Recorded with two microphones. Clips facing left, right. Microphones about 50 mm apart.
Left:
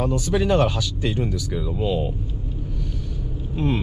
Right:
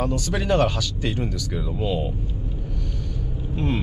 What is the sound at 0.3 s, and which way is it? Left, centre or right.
Speech, centre.